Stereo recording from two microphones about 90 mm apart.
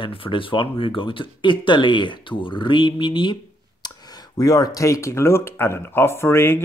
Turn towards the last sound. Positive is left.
turn(degrees=25)  # may be behind; listen again after turning